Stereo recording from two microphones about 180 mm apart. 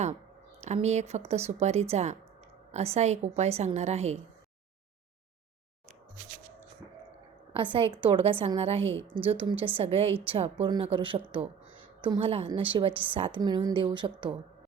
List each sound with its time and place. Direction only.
0.6 s speech: 40° right (ahead or behind)
7.5 s a woman's voice: 30° right (ahead or behind)